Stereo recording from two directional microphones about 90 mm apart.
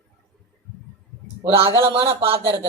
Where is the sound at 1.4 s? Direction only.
80° right.